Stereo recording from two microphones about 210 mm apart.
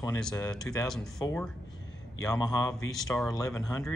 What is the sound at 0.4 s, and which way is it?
Speech, 15° left (ahead or behind).